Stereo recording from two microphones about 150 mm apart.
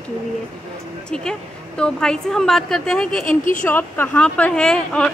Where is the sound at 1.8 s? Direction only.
5° left (ahead or behind).